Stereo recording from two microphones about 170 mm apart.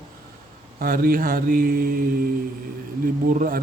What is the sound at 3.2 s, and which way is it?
Speech, 55° right (ahead or behind).